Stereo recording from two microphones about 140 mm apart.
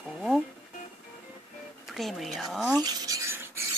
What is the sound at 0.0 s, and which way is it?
Music, 5° right (ahead or behind).